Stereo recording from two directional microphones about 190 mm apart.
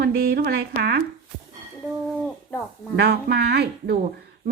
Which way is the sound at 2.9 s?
65° right (ahead or behind).